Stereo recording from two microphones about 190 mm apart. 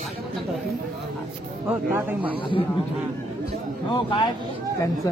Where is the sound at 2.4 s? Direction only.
25° left (ahead or behind).